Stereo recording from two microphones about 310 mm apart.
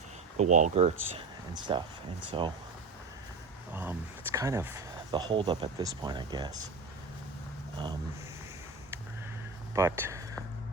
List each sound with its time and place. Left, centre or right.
0.3 s speech: right
3.7 s speech: centre
9.7 s speech: centre